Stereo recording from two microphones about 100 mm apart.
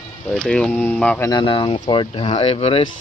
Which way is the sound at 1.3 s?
50° left (ahead or behind).